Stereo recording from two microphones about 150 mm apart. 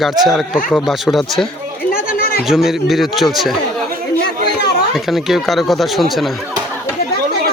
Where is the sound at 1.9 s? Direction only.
75° left (ahead or behind).